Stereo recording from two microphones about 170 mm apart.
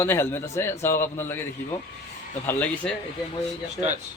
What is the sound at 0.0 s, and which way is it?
Speech, 15° left (ahead or behind).